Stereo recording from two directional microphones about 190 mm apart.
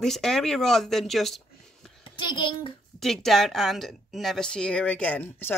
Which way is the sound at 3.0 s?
Centre (ahead or behind).